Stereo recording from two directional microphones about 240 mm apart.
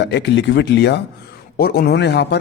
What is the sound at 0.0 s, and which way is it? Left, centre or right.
A man's voice, left.